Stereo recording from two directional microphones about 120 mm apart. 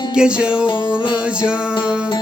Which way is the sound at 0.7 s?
40° left (ahead or behind).